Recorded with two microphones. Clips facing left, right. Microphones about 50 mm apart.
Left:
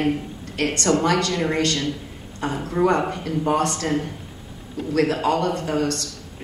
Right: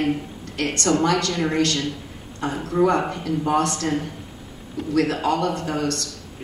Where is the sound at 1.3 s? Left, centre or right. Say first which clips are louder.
Right 1 dB; centre.